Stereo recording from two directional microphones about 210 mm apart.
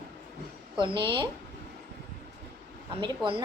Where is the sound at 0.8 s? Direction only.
25° right (ahead or behind).